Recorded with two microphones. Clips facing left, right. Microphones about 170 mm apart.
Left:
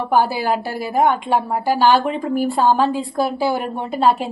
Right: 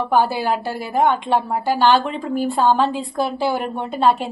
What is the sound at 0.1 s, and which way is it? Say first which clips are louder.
A woman's voice: left 2 dB; centre (ahead or behind).